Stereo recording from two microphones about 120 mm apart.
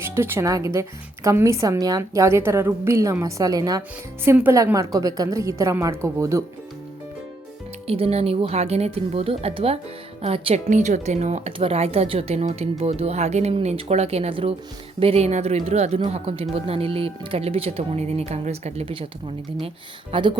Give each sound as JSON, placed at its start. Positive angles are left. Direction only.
{"t": 0.0, "sound": "a woman's voice", "side_deg": -20}
{"t": 7.9, "sound": "speech", "side_deg": -55}
{"t": 10.7, "sound": "speech", "side_deg": -85}
{"t": 11.5, "sound": "speech", "side_deg": -50}
{"t": 19.5, "sound": "speech", "side_deg": -50}